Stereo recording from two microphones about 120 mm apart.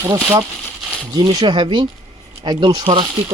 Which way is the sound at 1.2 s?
40° right (ahead or behind).